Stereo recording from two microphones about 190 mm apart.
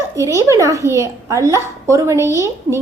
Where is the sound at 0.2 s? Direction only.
15° right (ahead or behind).